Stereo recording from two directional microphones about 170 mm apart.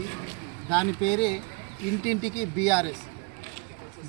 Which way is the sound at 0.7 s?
Centre (ahead or behind).